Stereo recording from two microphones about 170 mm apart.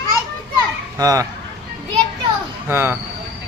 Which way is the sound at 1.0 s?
20° right (ahead or behind).